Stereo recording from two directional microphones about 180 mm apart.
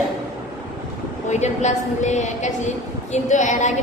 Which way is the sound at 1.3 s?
40° left (ahead or behind).